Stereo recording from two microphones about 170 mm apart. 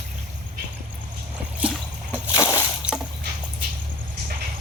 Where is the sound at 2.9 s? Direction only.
5° right (ahead or behind).